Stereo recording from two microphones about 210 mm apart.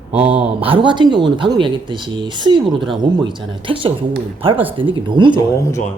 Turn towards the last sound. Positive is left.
turn(degrees=15)  # may be behind; listen again after turning